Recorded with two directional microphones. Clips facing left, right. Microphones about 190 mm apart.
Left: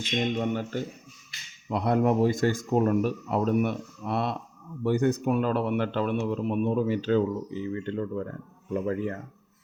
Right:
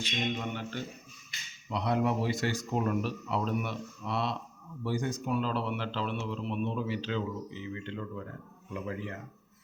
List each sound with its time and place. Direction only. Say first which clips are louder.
0.5 s speech: left 7 dB; 45° left (ahead or behind)